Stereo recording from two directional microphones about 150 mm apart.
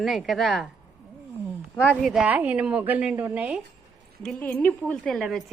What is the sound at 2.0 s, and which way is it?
A woman's voice, centre (ahead or behind).